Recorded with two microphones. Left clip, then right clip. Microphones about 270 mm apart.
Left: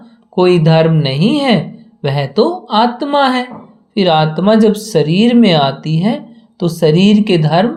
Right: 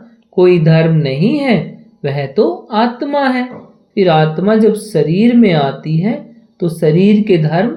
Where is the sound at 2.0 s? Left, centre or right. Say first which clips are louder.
Even; left.